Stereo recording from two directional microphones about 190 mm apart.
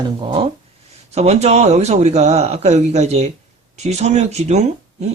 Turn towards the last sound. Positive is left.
turn(degrees=-35)  # may be behind; listen again after turning